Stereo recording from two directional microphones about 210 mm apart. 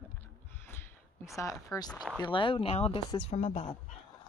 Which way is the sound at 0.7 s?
10° left (ahead or behind).